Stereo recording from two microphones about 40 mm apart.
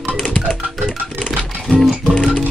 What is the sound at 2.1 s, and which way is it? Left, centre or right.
Music, left.